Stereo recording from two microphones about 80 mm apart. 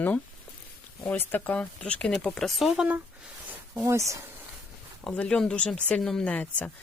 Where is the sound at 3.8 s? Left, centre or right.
Right.